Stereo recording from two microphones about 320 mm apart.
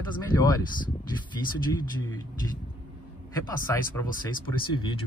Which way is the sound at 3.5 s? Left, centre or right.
Centre.